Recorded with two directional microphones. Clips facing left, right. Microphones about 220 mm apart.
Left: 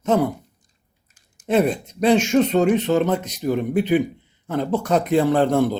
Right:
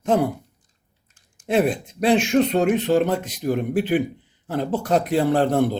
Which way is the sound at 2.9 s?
30° right (ahead or behind).